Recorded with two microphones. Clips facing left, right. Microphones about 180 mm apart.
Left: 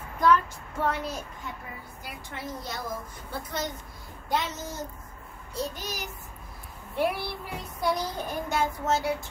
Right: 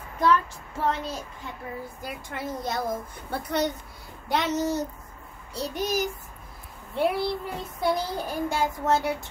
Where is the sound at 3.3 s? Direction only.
65° right (ahead or behind).